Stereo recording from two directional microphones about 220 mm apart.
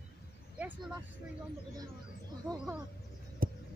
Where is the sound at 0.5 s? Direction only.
5° right (ahead or behind).